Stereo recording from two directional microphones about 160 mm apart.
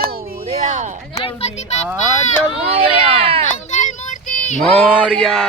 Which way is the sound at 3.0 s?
40° right (ahead or behind).